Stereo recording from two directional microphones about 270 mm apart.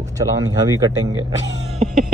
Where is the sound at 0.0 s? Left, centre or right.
Centre.